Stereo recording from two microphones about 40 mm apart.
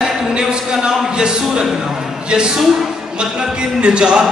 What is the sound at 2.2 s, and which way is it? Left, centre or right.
Music, right.